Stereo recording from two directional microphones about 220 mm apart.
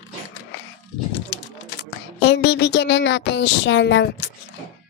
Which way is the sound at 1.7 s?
50° left (ahead or behind).